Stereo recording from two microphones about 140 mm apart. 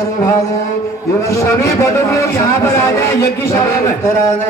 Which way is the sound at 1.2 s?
20° left (ahead or behind).